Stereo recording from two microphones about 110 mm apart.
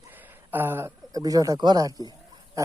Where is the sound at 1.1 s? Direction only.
35° right (ahead or behind).